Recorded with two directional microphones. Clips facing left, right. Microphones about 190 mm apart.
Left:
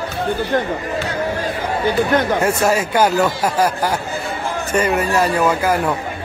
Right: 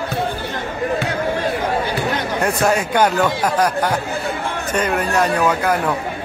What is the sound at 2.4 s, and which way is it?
Speech, 5° left (ahead or behind).